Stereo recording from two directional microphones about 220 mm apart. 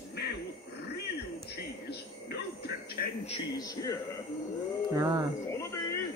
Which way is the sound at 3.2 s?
20° left (ahead or behind).